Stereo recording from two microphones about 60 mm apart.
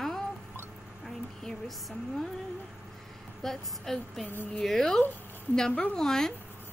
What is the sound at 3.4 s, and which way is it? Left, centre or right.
Speech, centre.